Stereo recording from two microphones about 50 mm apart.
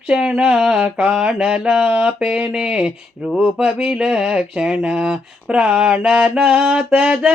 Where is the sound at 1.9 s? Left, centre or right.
Right.